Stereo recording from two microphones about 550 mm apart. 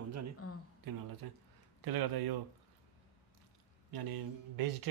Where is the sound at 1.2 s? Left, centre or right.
Right.